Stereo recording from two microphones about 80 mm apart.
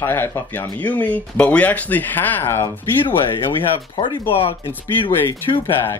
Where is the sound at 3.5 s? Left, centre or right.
Left.